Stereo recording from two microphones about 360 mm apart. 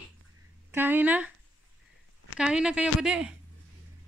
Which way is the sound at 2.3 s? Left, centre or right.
Centre.